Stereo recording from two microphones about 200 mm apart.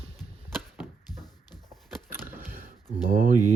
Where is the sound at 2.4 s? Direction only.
45° right (ahead or behind).